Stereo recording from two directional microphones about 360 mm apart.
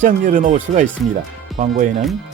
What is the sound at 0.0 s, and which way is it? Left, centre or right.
Speech, right.